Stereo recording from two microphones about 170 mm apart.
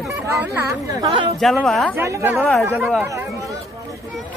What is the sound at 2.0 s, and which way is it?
Speech, 15° right (ahead or behind).